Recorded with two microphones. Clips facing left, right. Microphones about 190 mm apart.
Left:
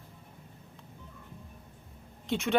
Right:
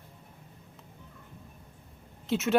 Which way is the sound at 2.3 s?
5° right (ahead or behind).